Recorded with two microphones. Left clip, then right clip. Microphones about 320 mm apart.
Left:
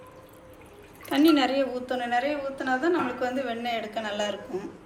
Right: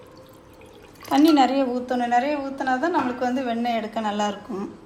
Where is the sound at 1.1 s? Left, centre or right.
Right.